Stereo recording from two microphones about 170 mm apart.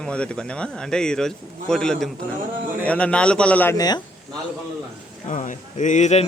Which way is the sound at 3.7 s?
25° left (ahead or behind).